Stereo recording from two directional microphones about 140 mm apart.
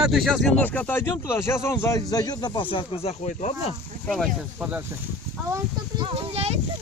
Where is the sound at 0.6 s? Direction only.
10° left (ahead or behind); by 3.5 s 50° left (ahead or behind).